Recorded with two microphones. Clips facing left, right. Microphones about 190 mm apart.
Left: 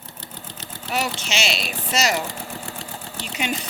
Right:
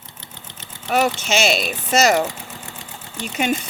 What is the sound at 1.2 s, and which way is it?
Speech, 50° right (ahead or behind).